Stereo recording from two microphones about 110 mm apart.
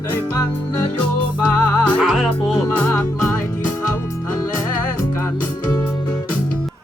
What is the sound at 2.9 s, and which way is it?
Music, 20° left (ahead or behind).